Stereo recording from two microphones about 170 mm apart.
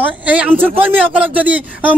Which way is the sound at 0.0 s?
10° right (ahead or behind).